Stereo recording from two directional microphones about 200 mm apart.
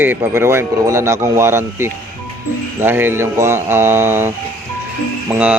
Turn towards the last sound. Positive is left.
turn(degrees=-5)  # may be behind; listen again after turning